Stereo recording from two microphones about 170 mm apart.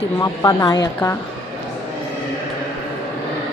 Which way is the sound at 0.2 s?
20° left (ahead or behind).